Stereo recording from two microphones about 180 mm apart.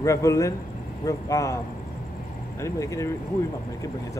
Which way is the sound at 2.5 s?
15° left (ahead or behind).